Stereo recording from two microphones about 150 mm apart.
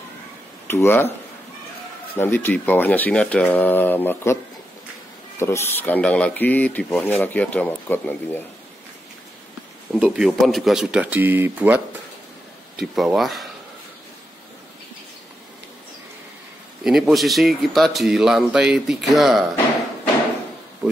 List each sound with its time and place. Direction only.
0.7 s speech: 15° left (ahead or behind)
2.1 s speech: 15° left (ahead or behind)
5.4 s speech: 15° left (ahead or behind)
9.9 s speech: 5° right (ahead or behind)
16.8 s speech: 5° right (ahead or behind)